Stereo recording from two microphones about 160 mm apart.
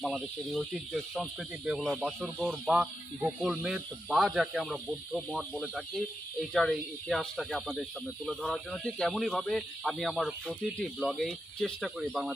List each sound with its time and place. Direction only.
0.0 s speech: centre (ahead or behind)